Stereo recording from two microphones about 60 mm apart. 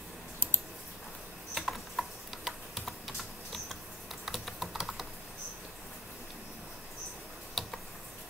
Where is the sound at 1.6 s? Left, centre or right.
Centre.